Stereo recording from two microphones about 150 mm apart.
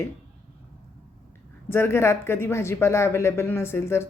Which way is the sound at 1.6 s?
15° left (ahead or behind).